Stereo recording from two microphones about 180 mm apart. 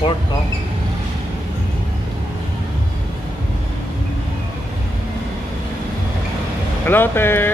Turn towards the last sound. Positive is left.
turn(degrees=10)  # may be behind; listen again after turning